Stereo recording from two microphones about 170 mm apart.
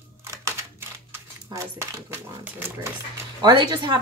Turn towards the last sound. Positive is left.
turn(degrees=-25)  # may be behind; listen again after turning